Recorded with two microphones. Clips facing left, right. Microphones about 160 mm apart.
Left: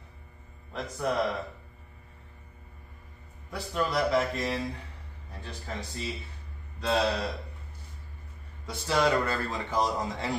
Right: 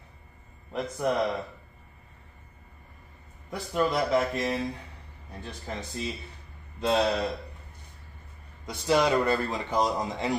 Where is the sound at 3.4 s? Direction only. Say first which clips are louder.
Right 3 dB; 20° right (ahead or behind).